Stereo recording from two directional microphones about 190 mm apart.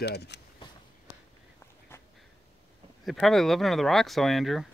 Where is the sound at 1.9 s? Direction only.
10° left (ahead or behind).